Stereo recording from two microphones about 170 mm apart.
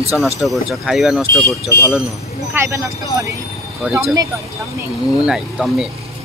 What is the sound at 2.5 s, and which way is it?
Speech, 15° right (ahead or behind).